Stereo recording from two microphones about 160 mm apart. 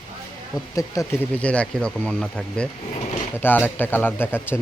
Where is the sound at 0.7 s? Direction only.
15° left (ahead or behind).